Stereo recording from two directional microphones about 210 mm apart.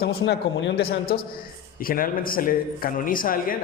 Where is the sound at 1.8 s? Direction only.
45° left (ahead or behind).